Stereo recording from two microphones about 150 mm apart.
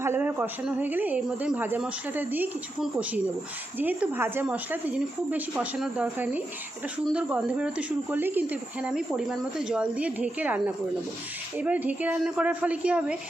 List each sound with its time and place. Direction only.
0.0 s speech: 15° right (ahead or behind)